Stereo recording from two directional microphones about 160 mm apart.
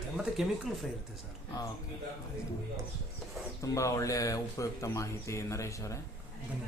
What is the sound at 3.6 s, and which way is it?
Speech, 20° left (ahead or behind).